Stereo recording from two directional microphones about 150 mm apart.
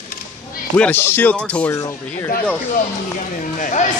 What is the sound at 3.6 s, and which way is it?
Speech, 55° left (ahead or behind).